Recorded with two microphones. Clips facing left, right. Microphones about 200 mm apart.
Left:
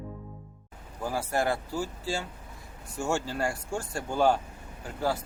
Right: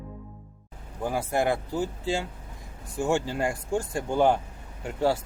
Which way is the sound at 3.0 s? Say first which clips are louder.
Right 4 dB; 15° right (ahead or behind).